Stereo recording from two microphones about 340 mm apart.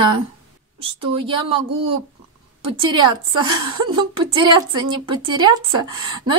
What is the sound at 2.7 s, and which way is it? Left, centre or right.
Speech, centre.